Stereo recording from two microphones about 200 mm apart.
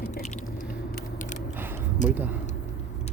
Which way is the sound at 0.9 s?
40° left (ahead or behind).